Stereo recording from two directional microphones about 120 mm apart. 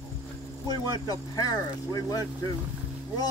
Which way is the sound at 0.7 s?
35° left (ahead or behind).